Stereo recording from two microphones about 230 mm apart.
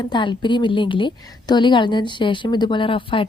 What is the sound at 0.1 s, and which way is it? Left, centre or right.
A woman's voice, left.